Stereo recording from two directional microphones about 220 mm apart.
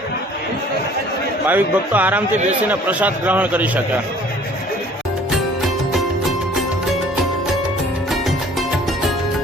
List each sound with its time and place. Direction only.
1.5 s a man's voice: 10° right (ahead or behind)
5.3 s music: centre (ahead or behind)